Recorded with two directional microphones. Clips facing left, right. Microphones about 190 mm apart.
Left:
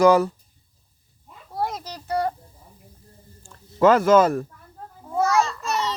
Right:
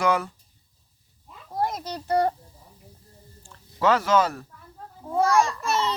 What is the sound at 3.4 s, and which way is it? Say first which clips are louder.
Speech: left 6 dB; 50° left (ahead or behind).